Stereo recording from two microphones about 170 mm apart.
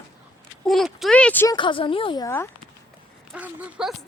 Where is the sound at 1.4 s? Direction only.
30° left (ahead or behind).